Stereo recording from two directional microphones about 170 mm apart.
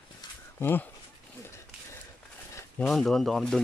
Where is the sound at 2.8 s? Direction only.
Centre (ahead or behind).